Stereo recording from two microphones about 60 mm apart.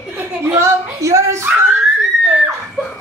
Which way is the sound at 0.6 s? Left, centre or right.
Right.